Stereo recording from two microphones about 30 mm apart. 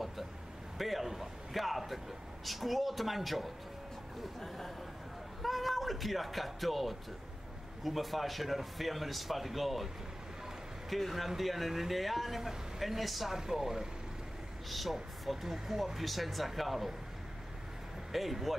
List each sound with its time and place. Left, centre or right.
0.7 s speech: centre
4.4 s speech: centre
10.9 s speech: centre
12.4 s a man's voice: centre
12.8 s speech: centre
13.3 s speech: centre
14.7 s speech: centre
16.0 s speech: centre
18.1 s speech: centre